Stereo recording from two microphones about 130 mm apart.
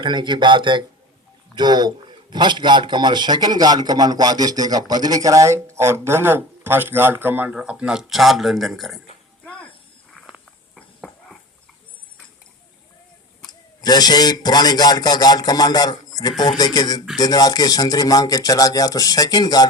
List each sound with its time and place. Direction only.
0.0 s a man's voice: 35° right (ahead or behind); by 9.0 s centre (ahead or behind)
10.8 s dog: centre (ahead or behind)
13.5 s speech: 30° left (ahead or behind)